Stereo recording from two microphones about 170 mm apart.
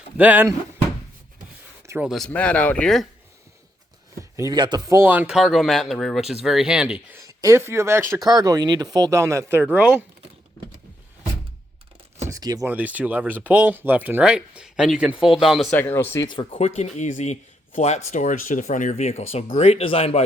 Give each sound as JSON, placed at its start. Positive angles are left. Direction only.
{"t": 0.2, "sound": "speech", "side_deg": -10}
{"t": 1.9, "sound": "speech", "side_deg": -10}
{"t": 2.1, "sound": "speech", "side_deg": 5}
{"t": 4.2, "sound": "speech", "side_deg": -20}
{"t": 7.2, "sound": "speech", "side_deg": -20}
{"t": 12.2, "sound": "a sound", "side_deg": -20}
{"t": 12.6, "sound": "speech", "side_deg": -10}
{"t": 15.7, "sound": "speech", "side_deg": 10}
{"t": 16.2, "sound": "speech", "side_deg": 25}